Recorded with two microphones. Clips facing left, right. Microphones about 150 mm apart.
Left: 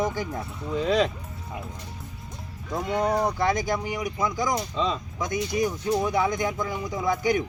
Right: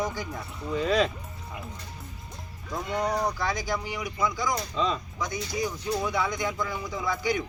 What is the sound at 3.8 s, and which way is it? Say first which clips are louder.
Speech: left 2 dB; 45° left (ahead or behind).